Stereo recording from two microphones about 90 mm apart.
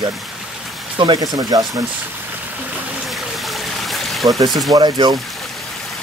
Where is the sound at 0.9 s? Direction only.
60° right (ahead or behind).